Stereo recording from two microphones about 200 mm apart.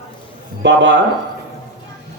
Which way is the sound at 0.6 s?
60° right (ahead or behind).